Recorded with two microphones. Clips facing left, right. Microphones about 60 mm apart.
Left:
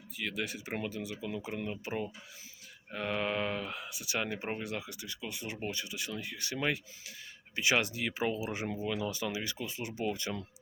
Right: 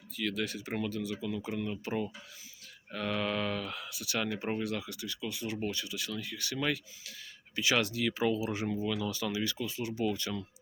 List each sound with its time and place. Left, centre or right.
0.2 s speech: centre